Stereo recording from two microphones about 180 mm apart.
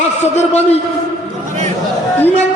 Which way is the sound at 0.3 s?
40° left (ahead or behind).